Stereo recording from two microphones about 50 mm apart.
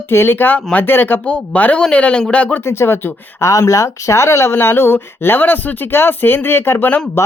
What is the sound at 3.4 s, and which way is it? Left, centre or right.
Speech, left.